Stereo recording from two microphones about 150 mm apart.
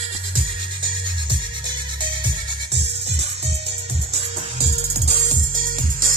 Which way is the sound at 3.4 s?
40° right (ahead or behind).